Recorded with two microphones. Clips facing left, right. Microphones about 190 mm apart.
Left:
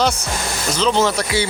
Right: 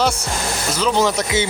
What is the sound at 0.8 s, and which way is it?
Speech, 10° right (ahead or behind).